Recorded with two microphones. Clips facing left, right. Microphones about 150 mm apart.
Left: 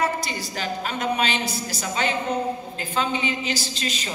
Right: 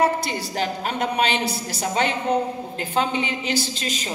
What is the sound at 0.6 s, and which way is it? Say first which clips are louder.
A woman's voice: right 3 dB; 60° right (ahead or behind).